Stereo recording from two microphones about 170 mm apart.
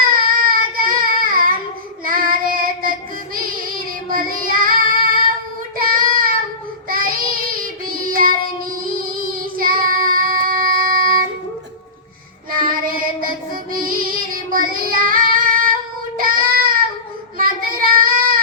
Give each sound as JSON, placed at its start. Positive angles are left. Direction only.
{"t": 0.1, "sound": "child singing", "side_deg": -55}
{"t": 12.6, "sound": "child singing", "side_deg": -55}